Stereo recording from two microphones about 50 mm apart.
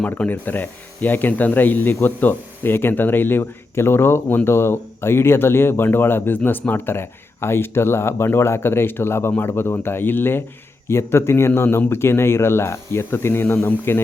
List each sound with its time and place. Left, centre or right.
0.0 s speech: left
10.8 s speech: left